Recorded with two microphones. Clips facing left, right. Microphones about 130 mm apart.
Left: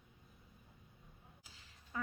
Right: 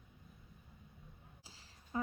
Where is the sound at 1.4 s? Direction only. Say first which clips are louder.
Right 2 dB; 30° right (ahead or behind).